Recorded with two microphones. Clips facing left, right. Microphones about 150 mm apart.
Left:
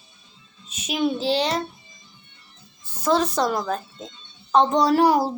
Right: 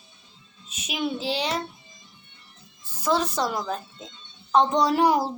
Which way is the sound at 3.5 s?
40° left (ahead or behind).